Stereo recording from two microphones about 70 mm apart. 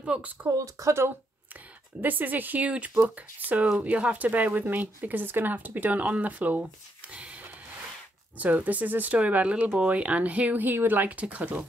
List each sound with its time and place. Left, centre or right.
0.0 s speech: centre
0.7 s speech: right
2.0 s speech: right